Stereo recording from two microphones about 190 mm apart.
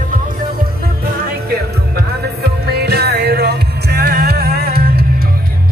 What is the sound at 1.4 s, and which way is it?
Music, 55° right (ahead or behind).